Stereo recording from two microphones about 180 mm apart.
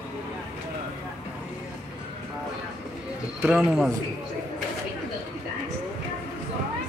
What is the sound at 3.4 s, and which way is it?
Speech, 5° right (ahead or behind).